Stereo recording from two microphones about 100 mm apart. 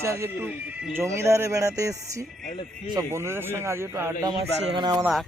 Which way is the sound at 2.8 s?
50° right (ahead or behind).